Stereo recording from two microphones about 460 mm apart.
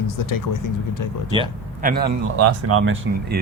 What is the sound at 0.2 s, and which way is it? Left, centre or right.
Speech, left.